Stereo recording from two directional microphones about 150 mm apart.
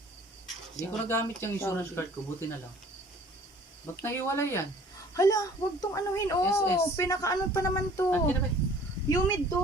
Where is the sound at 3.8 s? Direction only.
15° left (ahead or behind).